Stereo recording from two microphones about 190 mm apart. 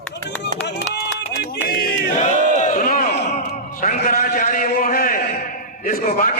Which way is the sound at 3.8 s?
45° left (ahead or behind).